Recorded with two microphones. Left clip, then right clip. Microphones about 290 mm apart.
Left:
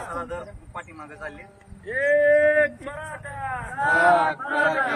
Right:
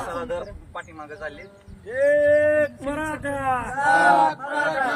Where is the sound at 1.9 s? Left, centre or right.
Right.